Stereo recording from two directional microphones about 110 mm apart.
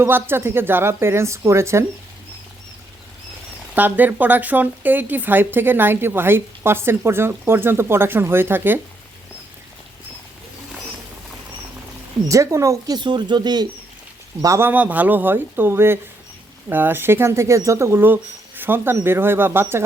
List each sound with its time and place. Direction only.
0.0 s a woman's voice: 20° right (ahead or behind)
3.8 s a woman's voice: 15° right (ahead or behind)
12.3 s a woman's voice: 30° right (ahead or behind)
13.0 s speech: 45° right (ahead or behind)
14.4 s a woman's voice: 25° right (ahead or behind)
14.7 s a woman's voice: 15° right (ahead or behind)